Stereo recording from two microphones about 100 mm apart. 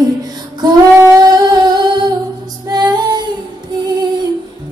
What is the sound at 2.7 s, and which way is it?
Female singing, 40° right (ahead or behind).